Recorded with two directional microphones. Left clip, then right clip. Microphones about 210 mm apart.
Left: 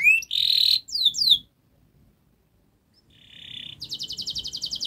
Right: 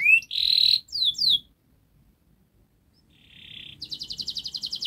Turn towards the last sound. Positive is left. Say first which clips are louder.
# left 1 dB
turn(degrees=15)  # may be behind; listen again after turning